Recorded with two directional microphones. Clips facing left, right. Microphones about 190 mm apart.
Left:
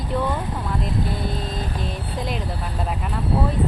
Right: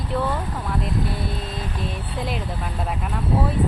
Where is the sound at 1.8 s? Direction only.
Centre (ahead or behind).